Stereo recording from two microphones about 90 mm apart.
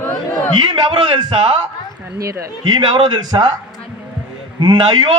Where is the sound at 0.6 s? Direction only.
55° right (ahead or behind).